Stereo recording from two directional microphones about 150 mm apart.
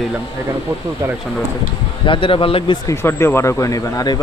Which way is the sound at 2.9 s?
15° left (ahead or behind).